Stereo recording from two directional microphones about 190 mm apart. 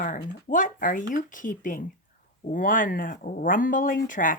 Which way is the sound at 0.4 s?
45° left (ahead or behind).